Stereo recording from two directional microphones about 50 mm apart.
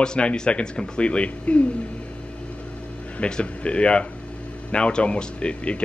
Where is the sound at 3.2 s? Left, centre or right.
Centre.